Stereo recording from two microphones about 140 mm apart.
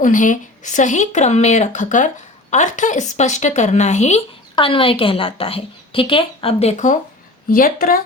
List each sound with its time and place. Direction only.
0.0 s speech: 65° left (ahead or behind)
4.5 s a woman's voice: 40° left (ahead or behind); by 7.0 s 60° left (ahead or behind)
7.5 s speech: 85° left